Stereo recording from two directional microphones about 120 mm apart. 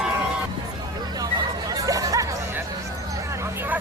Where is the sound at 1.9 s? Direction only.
30° right (ahead or behind).